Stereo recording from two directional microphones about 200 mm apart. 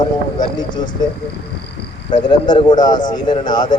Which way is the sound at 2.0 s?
20° left (ahead or behind).